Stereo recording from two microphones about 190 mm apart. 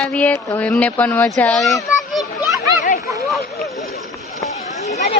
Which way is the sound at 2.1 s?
Centre (ahead or behind).